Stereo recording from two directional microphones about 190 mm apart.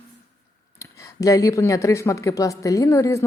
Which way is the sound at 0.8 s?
15° left (ahead or behind).